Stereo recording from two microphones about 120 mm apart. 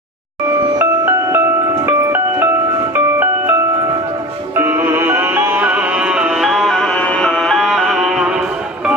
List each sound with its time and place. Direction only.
0.7 s music: 20° right (ahead or behind)
4.6 s music: 20° right (ahead or behind)